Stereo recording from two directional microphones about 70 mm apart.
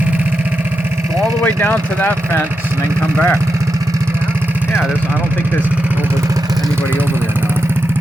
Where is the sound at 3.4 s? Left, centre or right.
Right.